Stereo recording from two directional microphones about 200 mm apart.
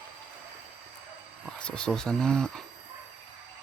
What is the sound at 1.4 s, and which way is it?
Speech, 5° left (ahead or behind).